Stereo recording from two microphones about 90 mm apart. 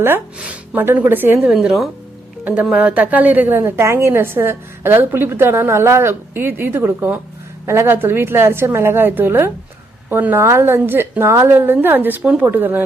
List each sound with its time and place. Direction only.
0.3 s speech: 15° right (ahead or behind)
1.5 s a woman's voice: 5° right (ahead or behind)
2.4 s a woman's voice: 15° right (ahead or behind)